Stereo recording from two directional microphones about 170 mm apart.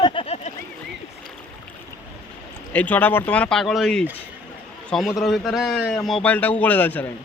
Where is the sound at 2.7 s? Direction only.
10° left (ahead or behind).